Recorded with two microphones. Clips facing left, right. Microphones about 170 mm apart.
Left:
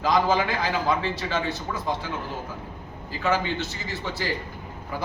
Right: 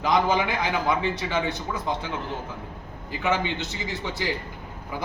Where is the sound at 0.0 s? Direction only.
20° right (ahead or behind).